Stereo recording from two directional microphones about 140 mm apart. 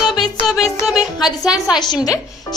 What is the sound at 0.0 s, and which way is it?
Music, centre (ahead or behind).